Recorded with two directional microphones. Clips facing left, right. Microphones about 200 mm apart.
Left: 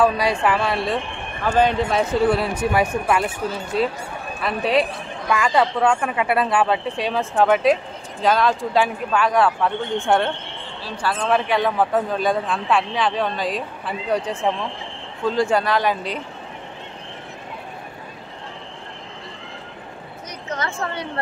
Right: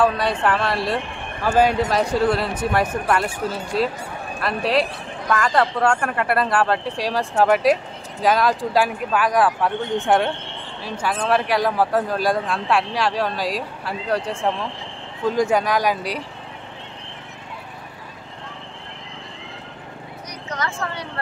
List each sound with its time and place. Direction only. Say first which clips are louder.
0.0 s speech: left 1 dB; 5° left (ahead or behind)
2.0 s speech: left 3 dB; 5° left (ahead or behind)
5.3 s speech: even; 10° left (ahead or behind)
15.4 s speech: even; 15° right (ahead or behind)
20.4 s speech: left 1 dB; 25° left (ahead or behind)